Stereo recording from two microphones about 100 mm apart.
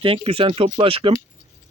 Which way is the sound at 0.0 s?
65° right (ahead or behind).